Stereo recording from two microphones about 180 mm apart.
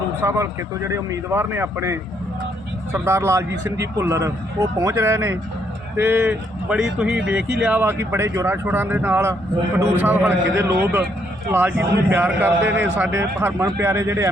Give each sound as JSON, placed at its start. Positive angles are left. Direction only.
{"t": 0.2, "sound": "speech", "side_deg": -15}